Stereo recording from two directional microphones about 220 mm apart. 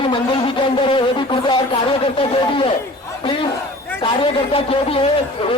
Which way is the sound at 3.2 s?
20° left (ahead or behind).